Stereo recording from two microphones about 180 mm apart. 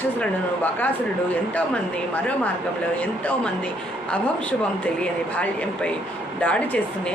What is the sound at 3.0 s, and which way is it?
Speech, 10° left (ahead or behind).